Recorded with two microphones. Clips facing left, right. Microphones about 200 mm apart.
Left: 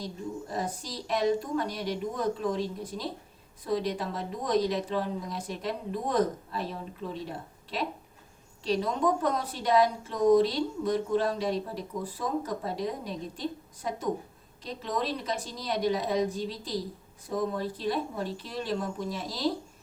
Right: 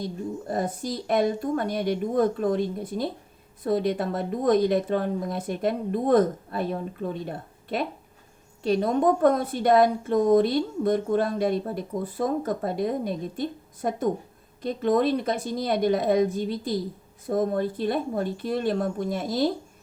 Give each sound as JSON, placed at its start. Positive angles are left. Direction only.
{"t": 0.0, "sound": "a woman's voice", "side_deg": -55}